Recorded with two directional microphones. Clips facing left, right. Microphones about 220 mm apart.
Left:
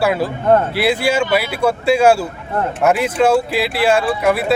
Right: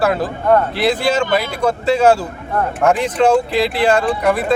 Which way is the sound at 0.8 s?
10° left (ahead or behind).